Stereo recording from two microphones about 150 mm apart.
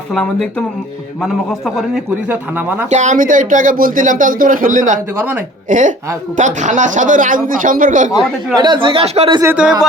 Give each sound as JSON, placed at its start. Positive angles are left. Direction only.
{"t": 0.1, "sound": "a man's voice", "side_deg": 5}
{"t": 2.3, "sound": "speech", "side_deg": -10}
{"t": 2.9, "sound": "speech", "side_deg": -55}
{"t": 5.1, "sound": "speech", "side_deg": -15}
{"t": 5.6, "sound": "speech", "side_deg": -55}
{"t": 8.5, "sound": "speech", "side_deg": -30}
{"t": 9.4, "sound": "speech", "side_deg": -10}